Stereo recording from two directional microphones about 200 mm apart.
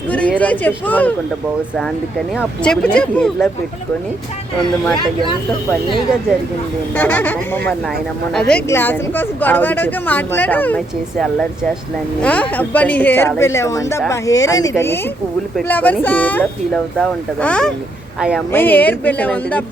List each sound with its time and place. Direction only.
0.1 s a woman's voice: 5° left (ahead or behind)
2.3 s speech: centre (ahead or behind)
6.9 s a woman's voice: 5° left (ahead or behind)
18.5 s a woman's voice: 10° left (ahead or behind)